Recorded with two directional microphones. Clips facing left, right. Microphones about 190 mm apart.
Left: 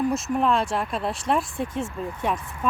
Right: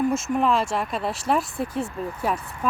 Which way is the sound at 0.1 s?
Centre (ahead or behind).